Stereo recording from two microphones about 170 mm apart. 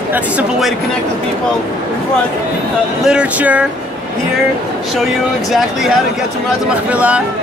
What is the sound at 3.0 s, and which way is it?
Speech, 5° right (ahead or behind).